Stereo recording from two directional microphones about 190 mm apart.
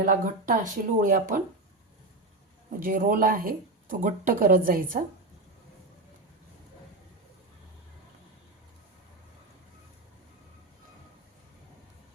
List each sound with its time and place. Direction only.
0.0 s speech: 45° right (ahead or behind)
2.8 s speech: 45° right (ahead or behind)